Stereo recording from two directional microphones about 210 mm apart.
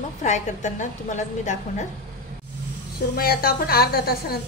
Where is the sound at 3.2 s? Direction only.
45° left (ahead or behind).